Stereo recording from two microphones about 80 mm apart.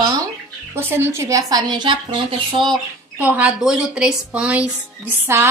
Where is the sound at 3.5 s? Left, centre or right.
Centre.